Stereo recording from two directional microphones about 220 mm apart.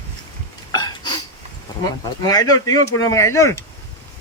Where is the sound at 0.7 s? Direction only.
15° left (ahead or behind).